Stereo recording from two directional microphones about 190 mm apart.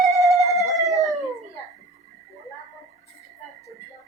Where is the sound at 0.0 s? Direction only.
Centre (ahead or behind).